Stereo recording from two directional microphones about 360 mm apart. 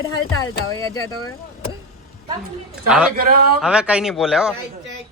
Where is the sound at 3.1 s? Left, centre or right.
Right.